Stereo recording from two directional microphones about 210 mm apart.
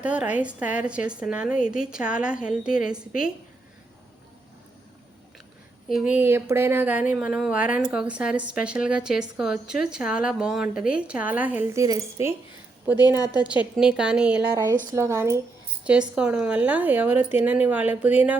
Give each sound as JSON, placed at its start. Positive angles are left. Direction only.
{"t": 0.0, "sound": "speech", "side_deg": -5}
{"t": 5.9, "sound": "speech", "side_deg": -5}
{"t": 13.1, "sound": "a woman's voice", "side_deg": 20}
{"t": 13.4, "sound": "speech", "side_deg": -5}